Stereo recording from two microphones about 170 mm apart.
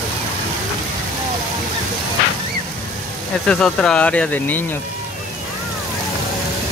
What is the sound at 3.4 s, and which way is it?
Speech, 5° left (ahead or behind).